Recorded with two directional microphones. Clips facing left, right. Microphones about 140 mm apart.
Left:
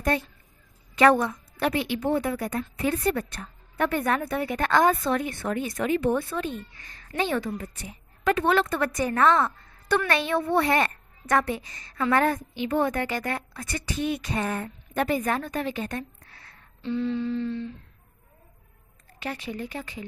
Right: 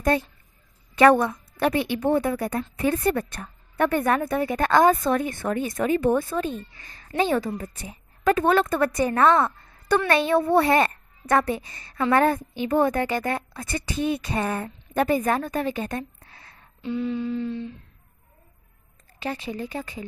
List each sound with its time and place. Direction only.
0.9 s a woman's voice: 50° right (ahead or behind); by 16.5 s 30° right (ahead or behind)
16.8 s a sound: 10° right (ahead or behind)
19.2 s a woman's voice: 30° right (ahead or behind)